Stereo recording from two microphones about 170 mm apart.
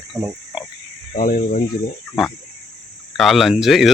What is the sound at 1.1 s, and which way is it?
Speech, 50° left (ahead or behind).